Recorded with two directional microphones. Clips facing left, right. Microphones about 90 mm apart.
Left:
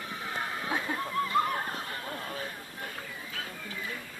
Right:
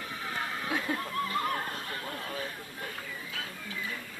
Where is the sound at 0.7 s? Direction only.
20° left (ahead or behind).